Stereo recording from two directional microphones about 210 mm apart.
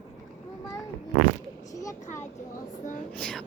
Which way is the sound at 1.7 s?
15° left (ahead or behind).